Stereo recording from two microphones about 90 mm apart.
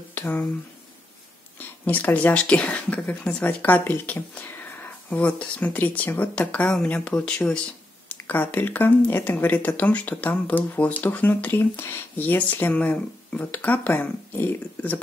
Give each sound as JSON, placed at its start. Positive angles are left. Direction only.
{"t": 0.1, "sound": "speech", "side_deg": 20}
{"t": 1.9, "sound": "speech", "side_deg": 20}